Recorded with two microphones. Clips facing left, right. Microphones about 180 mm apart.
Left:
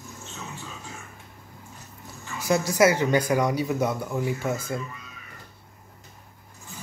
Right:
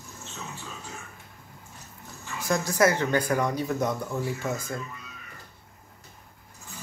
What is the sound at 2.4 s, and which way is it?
Speech, 10° left (ahead or behind).